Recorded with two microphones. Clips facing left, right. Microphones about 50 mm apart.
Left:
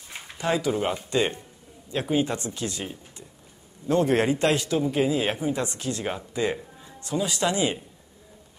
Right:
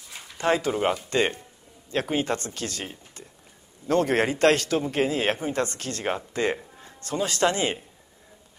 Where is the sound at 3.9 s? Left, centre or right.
Right.